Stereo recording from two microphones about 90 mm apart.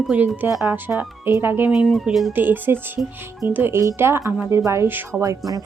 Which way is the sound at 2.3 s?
20° right (ahead or behind).